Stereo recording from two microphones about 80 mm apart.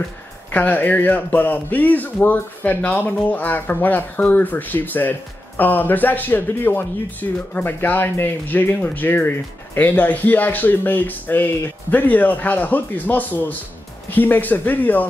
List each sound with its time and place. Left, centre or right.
0.5 s speech: left